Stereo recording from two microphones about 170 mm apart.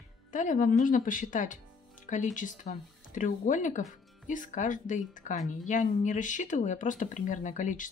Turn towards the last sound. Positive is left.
turn(degrees=50)  # may be behind; listen again after turning